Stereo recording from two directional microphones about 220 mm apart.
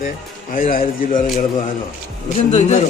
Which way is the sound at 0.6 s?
40° left (ahead or behind).